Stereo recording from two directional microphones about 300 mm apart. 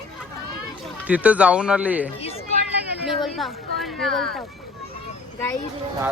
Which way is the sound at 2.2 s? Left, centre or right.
Centre.